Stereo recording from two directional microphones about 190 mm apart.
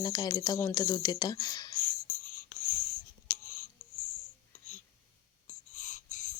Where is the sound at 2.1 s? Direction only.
45° left (ahead or behind).